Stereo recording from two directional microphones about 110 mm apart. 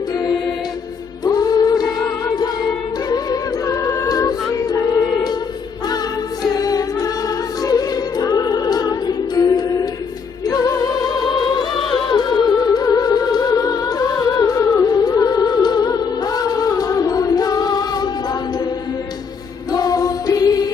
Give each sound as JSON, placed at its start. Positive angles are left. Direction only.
{"t": 1.2, "sound": "music", "side_deg": 35}
{"t": 6.4, "sound": "music", "side_deg": 35}
{"t": 19.7, "sound": "music", "side_deg": 35}